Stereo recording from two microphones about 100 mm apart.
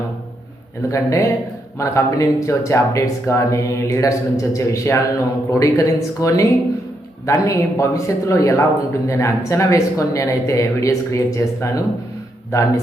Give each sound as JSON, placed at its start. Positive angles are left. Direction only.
{"t": 0.9, "sound": "a man's voice", "side_deg": 30}